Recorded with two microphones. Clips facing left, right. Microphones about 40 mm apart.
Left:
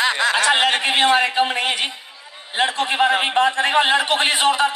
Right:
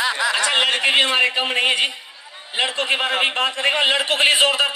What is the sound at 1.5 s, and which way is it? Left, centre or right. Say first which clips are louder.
Speech: right 2 dB; right.